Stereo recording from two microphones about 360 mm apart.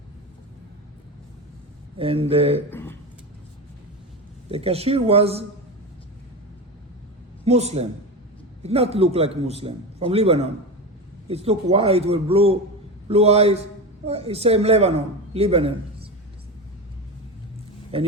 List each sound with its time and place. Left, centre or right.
2.0 s a man's voice: centre
2.6 s a sound: centre
4.5 s a man's voice: centre
7.4 s a man's voice: centre